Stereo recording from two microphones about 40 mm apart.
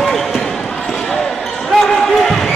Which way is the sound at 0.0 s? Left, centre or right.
Centre.